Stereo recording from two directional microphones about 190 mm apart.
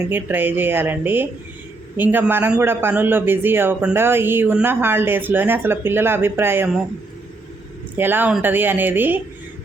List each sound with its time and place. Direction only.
0.1 s speech: 10° right (ahead or behind)
7.9 s speech: 10° right (ahead or behind)